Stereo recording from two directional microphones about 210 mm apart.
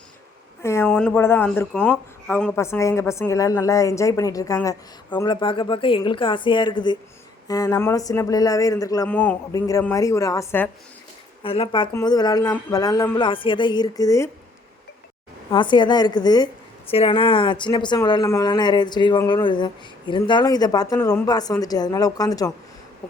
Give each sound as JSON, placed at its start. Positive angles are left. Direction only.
{"t": 0.6, "sound": "speech", "side_deg": 10}
{"t": 11.4, "sound": "speech", "side_deg": 25}
{"t": 15.4, "sound": "speech", "side_deg": 20}